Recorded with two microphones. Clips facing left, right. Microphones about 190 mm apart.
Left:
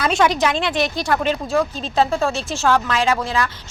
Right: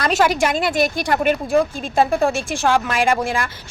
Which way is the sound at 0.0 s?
5° right (ahead or behind).